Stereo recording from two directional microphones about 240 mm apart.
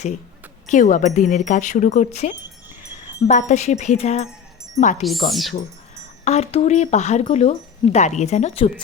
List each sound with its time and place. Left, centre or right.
0.7 s speech: left
5.3 s speech: centre
6.2 s speech: left